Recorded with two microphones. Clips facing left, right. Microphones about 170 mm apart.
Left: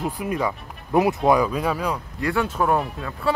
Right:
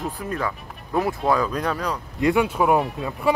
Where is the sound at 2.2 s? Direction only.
15° right (ahead or behind).